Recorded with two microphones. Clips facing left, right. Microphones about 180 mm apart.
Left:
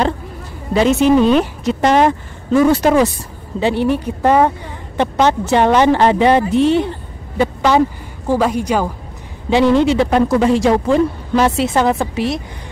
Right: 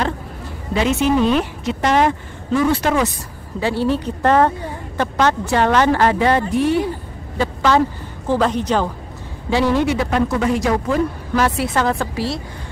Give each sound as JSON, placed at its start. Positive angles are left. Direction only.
{"t": 0.7, "sound": "a woman's voice", "side_deg": 40}
{"t": 3.5, "sound": "a woman's voice", "side_deg": 20}
{"t": 9.5, "sound": "a woman's voice", "side_deg": 20}